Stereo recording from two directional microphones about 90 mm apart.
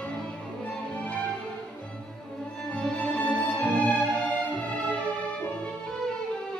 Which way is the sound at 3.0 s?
10° left (ahead or behind).